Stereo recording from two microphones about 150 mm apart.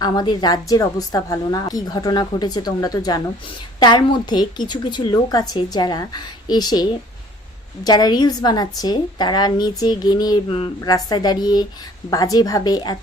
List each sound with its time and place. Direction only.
0.0 s a woman's voice: 25° left (ahead or behind)
7.9 s a woman's voice: 25° left (ahead or behind)